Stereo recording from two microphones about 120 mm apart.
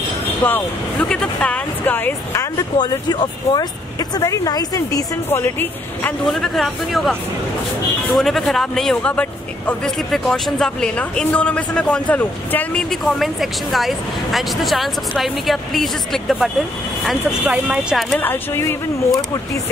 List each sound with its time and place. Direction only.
0.4 s a man's voice: 15° left (ahead or behind)
2.5 s speech: 35° left (ahead or behind)
5.3 s a man's voice: 20° left (ahead or behind)
6.2 s a man's voice: centre (ahead or behind)
12.9 s speech: centre (ahead or behind)
18.1 s a man's voice: 15° left (ahead or behind)